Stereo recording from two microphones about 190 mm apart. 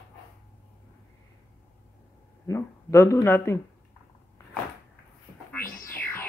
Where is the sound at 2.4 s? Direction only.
15° left (ahead or behind).